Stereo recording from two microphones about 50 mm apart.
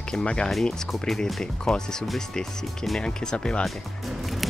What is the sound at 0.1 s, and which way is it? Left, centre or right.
Speech, centre.